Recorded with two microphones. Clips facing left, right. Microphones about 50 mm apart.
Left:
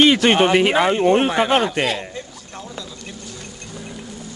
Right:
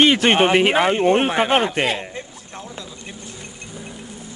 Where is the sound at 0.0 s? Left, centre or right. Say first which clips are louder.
Left 1 dB; right.